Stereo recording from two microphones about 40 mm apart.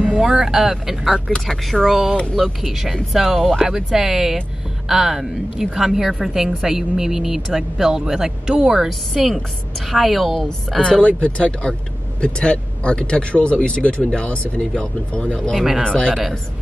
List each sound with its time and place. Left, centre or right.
0.2 s a woman's voice: centre
1.5 s speech: centre
1.9 s a woman's voice: centre
8.8 s a woman's voice: centre
11.0 s speech: left
15.5 s a woman's voice: centre
15.8 s speech: left